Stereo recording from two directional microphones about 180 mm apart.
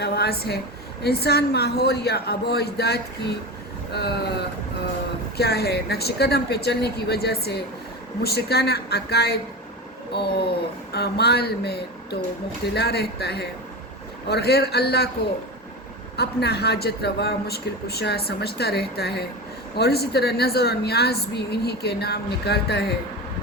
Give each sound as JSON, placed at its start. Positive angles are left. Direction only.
{"t": 0.0, "sound": "a man's voice", "side_deg": 60}
{"t": 5.4, "sound": "a man's voice", "side_deg": 60}
{"t": 16.1, "sound": "a man's voice", "side_deg": 65}